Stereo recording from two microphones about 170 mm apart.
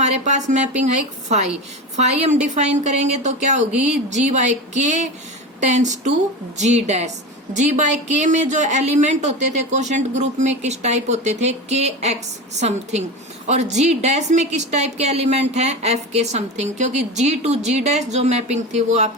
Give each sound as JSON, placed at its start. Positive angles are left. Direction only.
{"t": 0.0, "sound": "a woman's voice", "side_deg": -40}
{"t": 2.0, "sound": "a woman's voice", "side_deg": -40}